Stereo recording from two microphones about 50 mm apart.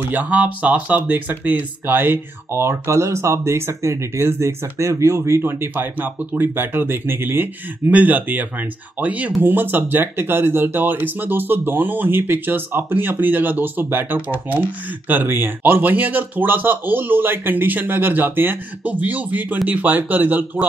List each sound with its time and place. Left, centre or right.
0.1 s speech: right
5.4 s speech: right
7.9 s speech: right
9.4 s speech: right